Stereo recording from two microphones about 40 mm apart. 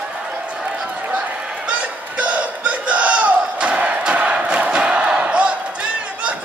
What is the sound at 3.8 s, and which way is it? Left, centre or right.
Crowd, right.